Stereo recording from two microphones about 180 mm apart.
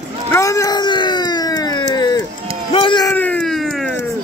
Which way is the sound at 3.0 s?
10° left (ahead or behind).